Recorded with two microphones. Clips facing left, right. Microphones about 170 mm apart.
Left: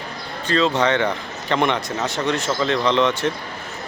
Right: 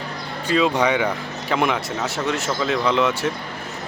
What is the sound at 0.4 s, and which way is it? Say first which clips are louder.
Speech: even; 10° right (ahead or behind).